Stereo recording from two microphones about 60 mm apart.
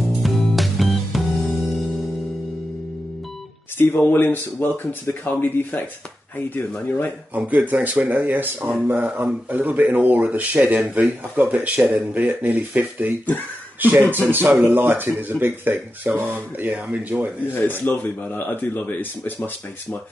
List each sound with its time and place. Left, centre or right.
0.2 s music: centre
3.7 s speech: left
7.3 s speech: right
13.7 s speech: right
17.6 s speech: left